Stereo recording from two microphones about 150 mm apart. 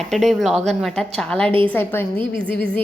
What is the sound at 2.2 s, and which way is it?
Speech, 35° right (ahead or behind).